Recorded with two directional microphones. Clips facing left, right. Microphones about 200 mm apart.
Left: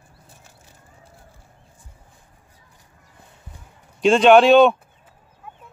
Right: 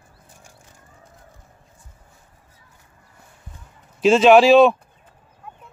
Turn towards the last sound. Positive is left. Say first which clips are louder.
# even
turn(degrees=0)  # may be behind; listen again after turning